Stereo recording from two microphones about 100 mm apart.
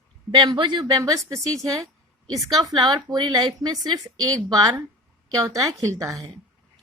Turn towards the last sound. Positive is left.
turn(degrees=-35)  # may be behind; listen again after turning